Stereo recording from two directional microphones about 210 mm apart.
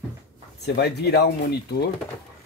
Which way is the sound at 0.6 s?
50° left (ahead or behind).